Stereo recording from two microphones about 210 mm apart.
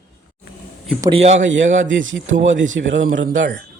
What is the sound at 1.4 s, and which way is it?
A man's voice, 60° right (ahead or behind).